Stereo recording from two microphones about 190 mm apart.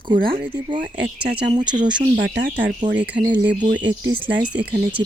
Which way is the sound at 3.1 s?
30° right (ahead or behind).